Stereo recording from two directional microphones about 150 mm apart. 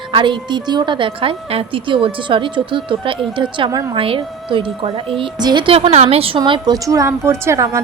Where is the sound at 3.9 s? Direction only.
35° right (ahead or behind); by 7.8 s 20° right (ahead or behind).